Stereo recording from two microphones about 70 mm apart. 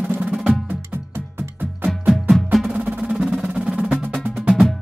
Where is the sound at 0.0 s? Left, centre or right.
Right.